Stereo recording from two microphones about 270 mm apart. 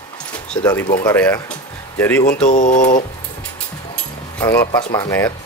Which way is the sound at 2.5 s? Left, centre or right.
Left.